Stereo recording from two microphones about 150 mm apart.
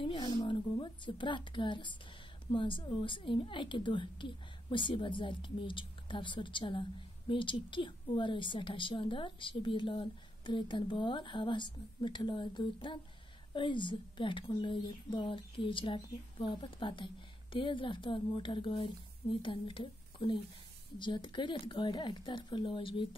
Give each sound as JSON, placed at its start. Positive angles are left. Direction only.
{"t": 0.0, "sound": "a woman's voice", "side_deg": 30}